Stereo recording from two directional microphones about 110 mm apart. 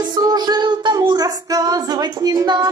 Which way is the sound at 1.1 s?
35° right (ahead or behind).